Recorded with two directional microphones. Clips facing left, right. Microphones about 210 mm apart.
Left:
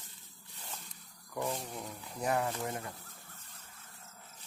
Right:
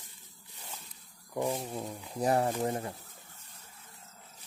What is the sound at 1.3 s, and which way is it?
Speech, 15° right (ahead or behind).